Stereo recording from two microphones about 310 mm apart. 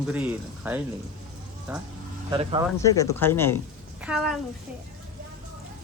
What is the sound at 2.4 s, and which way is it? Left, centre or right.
Speech, centre.